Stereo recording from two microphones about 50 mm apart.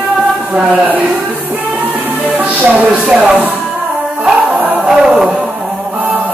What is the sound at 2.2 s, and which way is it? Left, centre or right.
Music, right.